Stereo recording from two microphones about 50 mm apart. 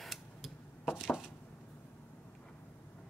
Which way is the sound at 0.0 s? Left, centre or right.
Centre.